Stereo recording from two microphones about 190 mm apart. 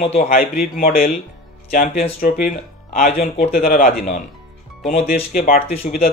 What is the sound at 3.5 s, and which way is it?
A man's voice, 50° left (ahead or behind).